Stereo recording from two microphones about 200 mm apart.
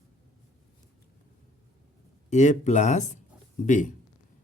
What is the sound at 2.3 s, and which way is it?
A man's voice, 35° left (ahead or behind).